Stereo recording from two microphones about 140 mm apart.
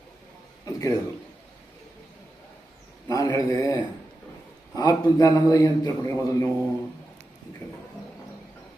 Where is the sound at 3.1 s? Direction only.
25° left (ahead or behind).